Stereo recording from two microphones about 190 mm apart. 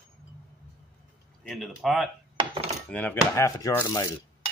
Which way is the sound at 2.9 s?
10° left (ahead or behind).